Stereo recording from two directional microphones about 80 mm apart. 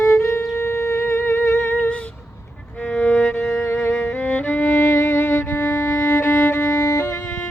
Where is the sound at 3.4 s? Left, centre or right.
Left.